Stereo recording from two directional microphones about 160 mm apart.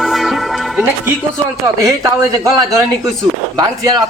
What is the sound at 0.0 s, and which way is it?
Music, centre (ahead or behind).